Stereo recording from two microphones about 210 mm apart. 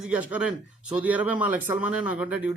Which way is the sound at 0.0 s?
5° right (ahead or behind).